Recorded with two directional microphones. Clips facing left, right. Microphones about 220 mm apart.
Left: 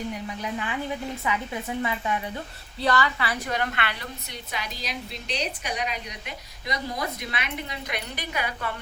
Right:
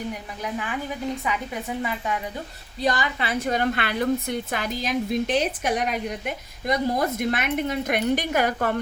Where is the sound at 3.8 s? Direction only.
45° right (ahead or behind).